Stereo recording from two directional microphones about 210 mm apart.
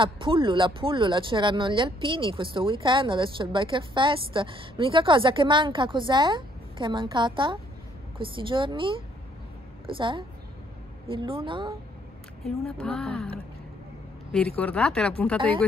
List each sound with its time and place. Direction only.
0.0 s speech: 25° right (ahead or behind)
12.7 s speech: 5° left (ahead or behind)
14.6 s speech: 5° left (ahead or behind)